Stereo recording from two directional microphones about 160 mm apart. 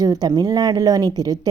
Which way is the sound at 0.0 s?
25° right (ahead or behind).